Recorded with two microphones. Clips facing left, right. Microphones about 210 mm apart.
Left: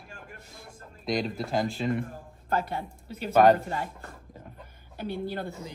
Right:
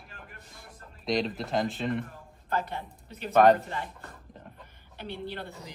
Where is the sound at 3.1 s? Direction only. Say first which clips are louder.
Left 1 dB; centre (ahead or behind).